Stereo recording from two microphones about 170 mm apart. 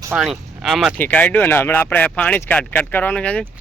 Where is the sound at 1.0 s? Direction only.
10° left (ahead or behind).